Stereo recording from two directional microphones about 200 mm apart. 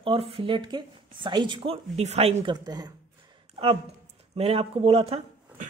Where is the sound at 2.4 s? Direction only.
20° right (ahead or behind).